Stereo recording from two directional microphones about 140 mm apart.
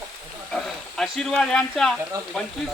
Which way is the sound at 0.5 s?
Centre (ahead or behind).